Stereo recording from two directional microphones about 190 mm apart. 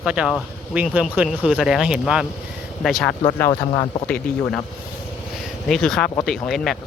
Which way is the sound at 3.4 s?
15° left (ahead or behind).